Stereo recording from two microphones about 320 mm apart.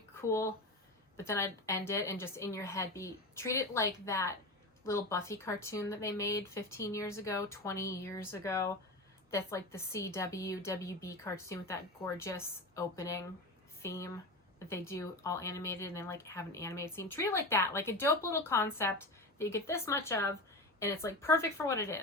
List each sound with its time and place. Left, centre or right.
0.2 s speech: centre